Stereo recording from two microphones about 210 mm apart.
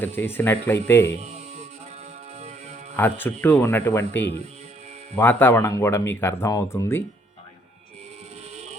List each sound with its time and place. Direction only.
0.0 s speech: 10° left (ahead or behind)
1.2 s music: 30° right (ahead or behind)
2.9 s speech: 10° left (ahead or behind)